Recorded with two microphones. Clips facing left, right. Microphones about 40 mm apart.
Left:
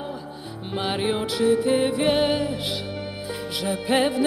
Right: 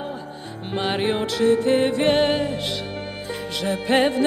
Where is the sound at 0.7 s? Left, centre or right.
Centre.